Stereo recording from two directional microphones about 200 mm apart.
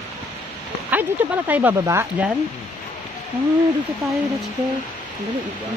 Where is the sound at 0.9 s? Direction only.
10° right (ahead or behind).